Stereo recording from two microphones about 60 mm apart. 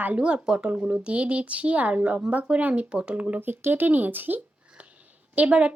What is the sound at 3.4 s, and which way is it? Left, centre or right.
Speech, right.